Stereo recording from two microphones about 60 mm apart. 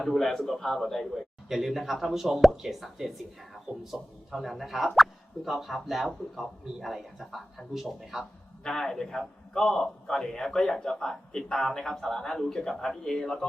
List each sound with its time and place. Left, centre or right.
0.0 s a man's voice: centre
8.6 s a man's voice: centre